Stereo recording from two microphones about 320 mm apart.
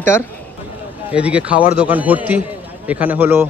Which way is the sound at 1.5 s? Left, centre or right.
Left.